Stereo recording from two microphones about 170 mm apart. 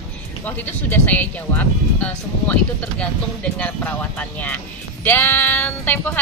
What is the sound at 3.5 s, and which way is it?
Speech, 10° left (ahead or behind).